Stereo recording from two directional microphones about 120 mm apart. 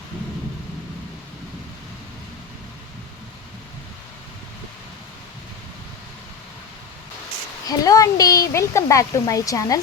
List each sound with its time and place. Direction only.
7.7 s speech: 30° left (ahead or behind)